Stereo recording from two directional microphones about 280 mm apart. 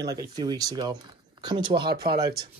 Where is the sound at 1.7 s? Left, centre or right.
Right.